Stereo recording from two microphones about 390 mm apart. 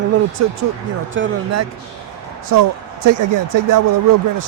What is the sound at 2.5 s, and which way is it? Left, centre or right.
Speech, right.